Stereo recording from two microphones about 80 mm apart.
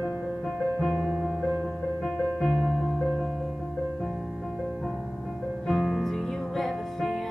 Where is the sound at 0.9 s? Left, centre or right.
Centre.